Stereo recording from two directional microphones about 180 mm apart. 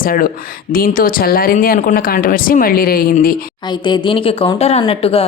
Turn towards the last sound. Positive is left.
turn(degrees=30)  # may be behind; listen again after turning